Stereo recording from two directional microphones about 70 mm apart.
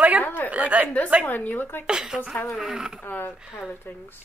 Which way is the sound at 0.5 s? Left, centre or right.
Right.